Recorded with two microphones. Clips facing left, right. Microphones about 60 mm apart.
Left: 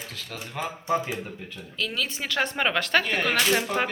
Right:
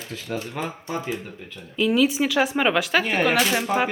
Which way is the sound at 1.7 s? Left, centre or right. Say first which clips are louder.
Right 11 dB; centre.